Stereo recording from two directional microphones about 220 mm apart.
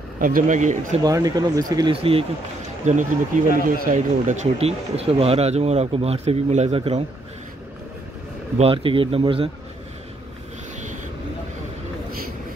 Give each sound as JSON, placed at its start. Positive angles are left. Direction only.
{"t": 0.2, "sound": "speech", "side_deg": -40}
{"t": 1.0, "sound": "speech", "side_deg": -15}
{"t": 8.5, "sound": "speech", "side_deg": -25}